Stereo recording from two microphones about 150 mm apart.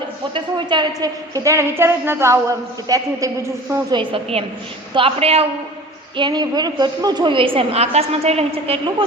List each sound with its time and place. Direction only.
0.3 s a woman's voice: 30° right (ahead or behind)
3.9 s a woman's voice: 40° right (ahead or behind)
6.1 s a woman's voice: 30° right (ahead or behind)